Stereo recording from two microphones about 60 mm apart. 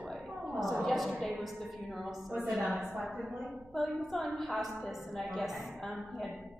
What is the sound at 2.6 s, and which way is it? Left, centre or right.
Speech, right.